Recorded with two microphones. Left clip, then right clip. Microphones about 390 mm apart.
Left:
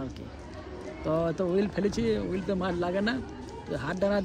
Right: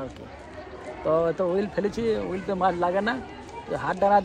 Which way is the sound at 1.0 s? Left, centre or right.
Right.